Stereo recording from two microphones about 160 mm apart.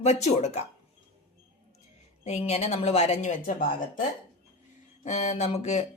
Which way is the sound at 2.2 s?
40° left (ahead or behind).